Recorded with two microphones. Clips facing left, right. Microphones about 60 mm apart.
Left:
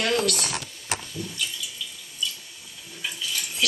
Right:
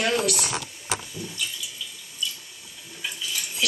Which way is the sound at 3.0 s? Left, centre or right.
Centre.